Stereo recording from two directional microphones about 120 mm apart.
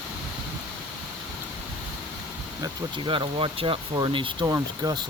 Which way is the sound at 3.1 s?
45° right (ahead or behind).